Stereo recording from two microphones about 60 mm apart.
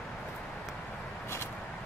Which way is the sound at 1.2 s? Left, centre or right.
Left.